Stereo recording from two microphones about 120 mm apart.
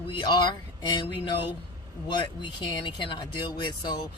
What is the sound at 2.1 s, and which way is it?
Speech, 40° left (ahead or behind).